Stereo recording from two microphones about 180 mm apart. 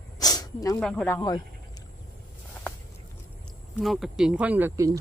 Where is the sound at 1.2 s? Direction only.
20° left (ahead or behind).